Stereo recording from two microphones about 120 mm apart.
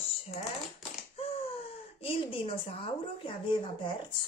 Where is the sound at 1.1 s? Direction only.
55° left (ahead or behind).